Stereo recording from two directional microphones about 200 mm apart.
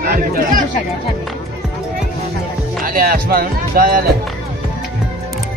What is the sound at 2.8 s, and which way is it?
Speech, 50° right (ahead or behind).